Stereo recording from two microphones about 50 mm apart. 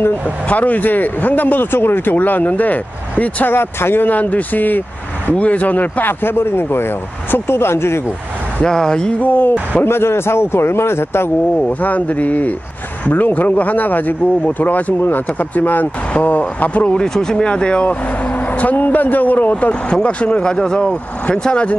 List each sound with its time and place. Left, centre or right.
0.5 s a man's voice: left
3.5 s a man's voice: left
5.3 s speech: left
8.6 s speech: centre
9.2 s a man's voice: left
9.8 s a man's voice: left
11.8 s a man's voice: left
17.0 s speech: centre; by 19.5 s left
19.6 s speech: left